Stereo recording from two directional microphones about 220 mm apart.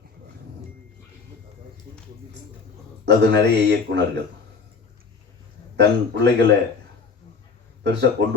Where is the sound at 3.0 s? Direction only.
50° right (ahead or behind).